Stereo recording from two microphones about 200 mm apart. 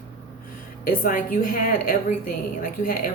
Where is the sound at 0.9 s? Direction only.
45° left (ahead or behind).